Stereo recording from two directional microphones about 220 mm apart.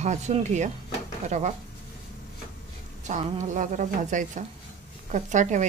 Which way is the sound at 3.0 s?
35° right (ahead or behind).